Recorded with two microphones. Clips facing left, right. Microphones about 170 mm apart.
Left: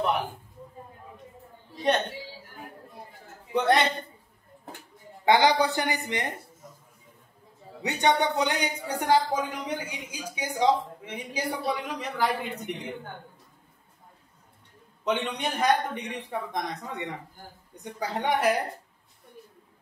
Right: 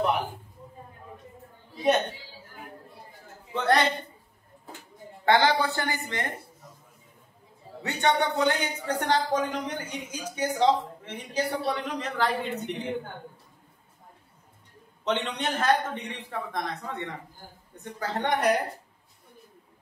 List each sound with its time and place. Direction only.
3.5 s a woman's voice: 20° left (ahead or behind)
5.2 s speech: 15° left (ahead or behind)
7.8 s speech: 20° left (ahead or behind)
15.0 s speech: 10° left (ahead or behind)